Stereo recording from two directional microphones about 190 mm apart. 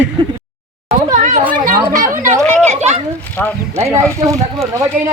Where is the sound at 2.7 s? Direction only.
35° right (ahead or behind).